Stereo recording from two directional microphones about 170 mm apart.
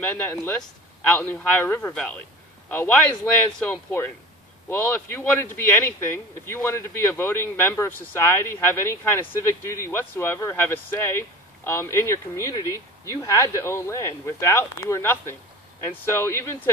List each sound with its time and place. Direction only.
0.0 s speech: 10° left (ahead or behind)